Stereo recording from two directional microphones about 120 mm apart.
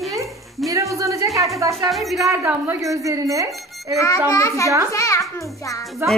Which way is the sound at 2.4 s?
20° right (ahead or behind).